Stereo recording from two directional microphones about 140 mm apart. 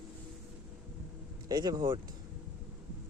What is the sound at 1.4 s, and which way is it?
Speech, 25° right (ahead or behind).